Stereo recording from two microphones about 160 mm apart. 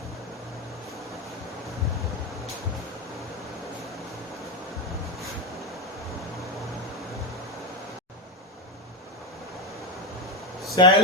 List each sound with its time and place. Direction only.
10.8 s speech: 30° left (ahead or behind)